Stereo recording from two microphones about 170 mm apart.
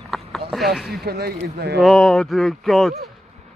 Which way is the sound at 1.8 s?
Centre (ahead or behind).